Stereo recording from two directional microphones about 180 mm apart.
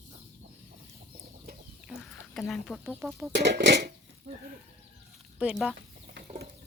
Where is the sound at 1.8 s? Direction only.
Centre (ahead or behind).